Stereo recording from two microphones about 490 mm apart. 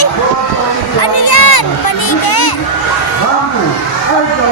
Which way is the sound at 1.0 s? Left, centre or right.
Left.